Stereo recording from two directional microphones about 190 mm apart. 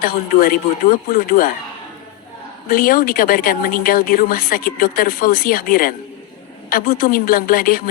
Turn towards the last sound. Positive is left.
turn(degrees=50)  # may be behind; listen again after turning